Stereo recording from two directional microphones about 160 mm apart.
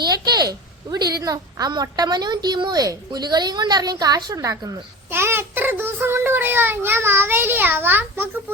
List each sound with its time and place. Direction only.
0.0 s a woman's voice: 25° right (ahead or behind)